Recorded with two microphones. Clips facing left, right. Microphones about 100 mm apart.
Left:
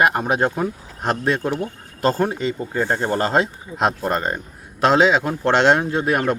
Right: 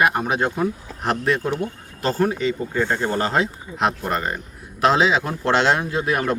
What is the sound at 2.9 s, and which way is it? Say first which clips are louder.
Speech: left 2 dB; 20° left (ahead or behind).